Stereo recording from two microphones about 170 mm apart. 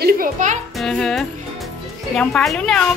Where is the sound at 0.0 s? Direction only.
50° right (ahead or behind).